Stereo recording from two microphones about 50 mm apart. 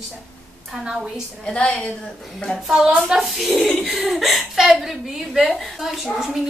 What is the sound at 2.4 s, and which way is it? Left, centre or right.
A woman's voice, centre.